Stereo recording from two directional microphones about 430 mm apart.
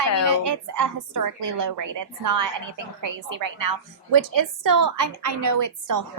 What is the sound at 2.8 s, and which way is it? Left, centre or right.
Speech, right.